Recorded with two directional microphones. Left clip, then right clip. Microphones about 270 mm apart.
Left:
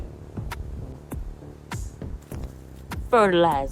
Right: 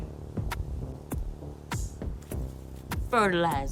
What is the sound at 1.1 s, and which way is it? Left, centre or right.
Music, centre.